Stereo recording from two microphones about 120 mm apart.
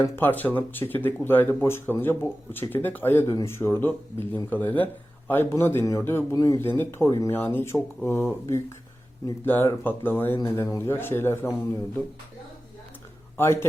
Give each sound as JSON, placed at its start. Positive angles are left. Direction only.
{"t": 0.2, "sound": "speech", "side_deg": 15}
{"t": 13.3, "sound": "speech", "side_deg": 20}